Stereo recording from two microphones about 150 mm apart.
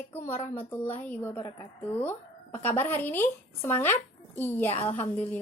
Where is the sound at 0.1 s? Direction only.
15° left (ahead or behind).